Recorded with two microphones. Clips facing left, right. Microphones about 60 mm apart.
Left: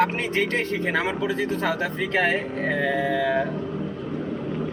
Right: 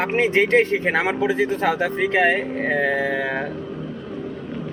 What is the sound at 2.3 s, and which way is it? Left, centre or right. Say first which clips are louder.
Speech: right 3 dB; right.